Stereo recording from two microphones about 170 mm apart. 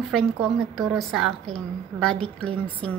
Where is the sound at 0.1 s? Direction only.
Centre (ahead or behind).